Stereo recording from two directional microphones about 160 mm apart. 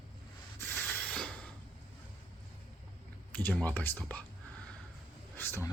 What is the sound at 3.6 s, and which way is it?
Speech, 10° left (ahead or behind).